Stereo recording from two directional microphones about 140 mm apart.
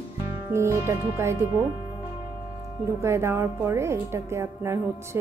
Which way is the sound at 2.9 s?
20° right (ahead or behind).